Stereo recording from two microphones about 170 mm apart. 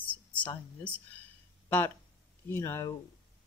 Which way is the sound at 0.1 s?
10° left (ahead or behind).